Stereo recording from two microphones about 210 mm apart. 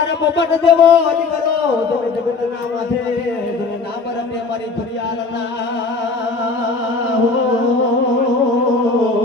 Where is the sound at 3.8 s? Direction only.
50° left (ahead or behind).